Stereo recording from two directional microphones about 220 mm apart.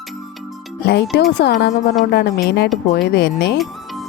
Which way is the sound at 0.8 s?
50° left (ahead or behind).